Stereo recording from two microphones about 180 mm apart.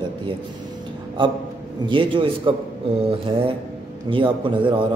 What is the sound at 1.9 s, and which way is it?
Speech, 30° right (ahead or behind).